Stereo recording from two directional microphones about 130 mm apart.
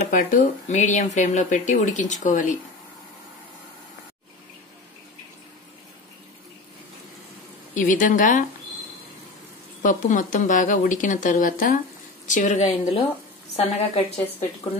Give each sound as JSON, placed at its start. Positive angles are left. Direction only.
{"t": 0.1, "sound": "speech", "side_deg": 75}
{"t": 7.7, "sound": "speech", "side_deg": 85}
{"t": 9.8, "sound": "speech", "side_deg": 80}
{"t": 13.6, "sound": "a woman's voice", "side_deg": 50}